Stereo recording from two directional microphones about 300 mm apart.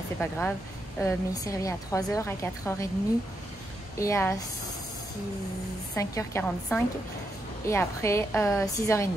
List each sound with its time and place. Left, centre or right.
0.2 s a woman's voice: centre
4.0 s a woman's voice: centre
5.9 s a woman's voice: centre